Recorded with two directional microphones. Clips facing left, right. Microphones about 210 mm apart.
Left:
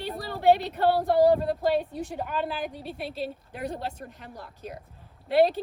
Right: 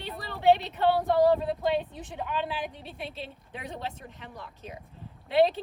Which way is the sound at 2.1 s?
40° left (ahead or behind).